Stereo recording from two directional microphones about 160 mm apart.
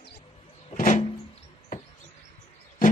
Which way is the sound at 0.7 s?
50° left (ahead or behind).